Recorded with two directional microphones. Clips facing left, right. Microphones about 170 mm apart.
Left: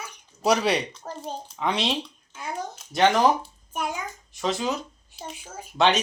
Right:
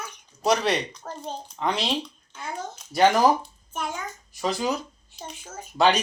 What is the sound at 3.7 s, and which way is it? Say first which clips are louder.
Speech: left 2 dB; 10° left (ahead or behind).